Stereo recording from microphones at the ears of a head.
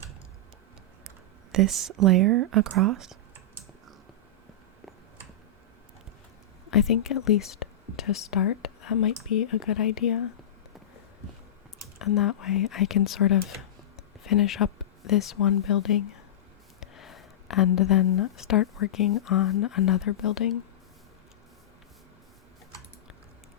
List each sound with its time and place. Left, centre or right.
1.5 s speech: right
6.7 s speech: left
11.9 s speech: left